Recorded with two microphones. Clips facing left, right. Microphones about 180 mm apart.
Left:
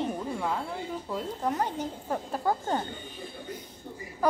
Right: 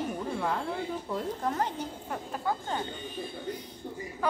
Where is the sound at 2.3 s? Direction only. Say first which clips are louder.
Left 3 dB; 40° left (ahead or behind).